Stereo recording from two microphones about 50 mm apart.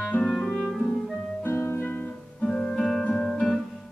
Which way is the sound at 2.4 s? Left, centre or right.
Centre.